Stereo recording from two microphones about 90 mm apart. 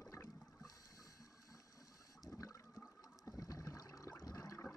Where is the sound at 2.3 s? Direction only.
40° left (ahead or behind).